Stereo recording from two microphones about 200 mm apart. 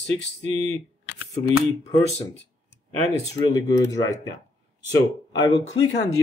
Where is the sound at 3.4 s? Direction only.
20° left (ahead or behind).